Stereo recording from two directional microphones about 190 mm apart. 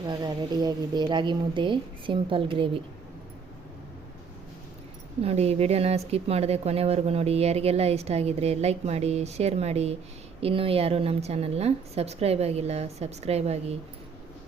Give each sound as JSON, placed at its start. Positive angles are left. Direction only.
{"t": 0.1, "sound": "speech", "side_deg": -20}
{"t": 5.2, "sound": "speech", "side_deg": -35}